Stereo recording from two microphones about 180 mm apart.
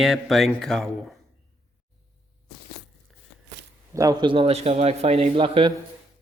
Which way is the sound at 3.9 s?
20° right (ahead or behind).